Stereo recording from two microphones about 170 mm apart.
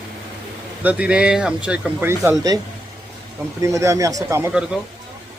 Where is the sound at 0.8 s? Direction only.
10° right (ahead or behind).